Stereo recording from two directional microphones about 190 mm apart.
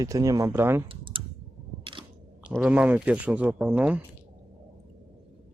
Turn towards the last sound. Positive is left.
turn(degrees=-5)  # may be behind; listen again after turning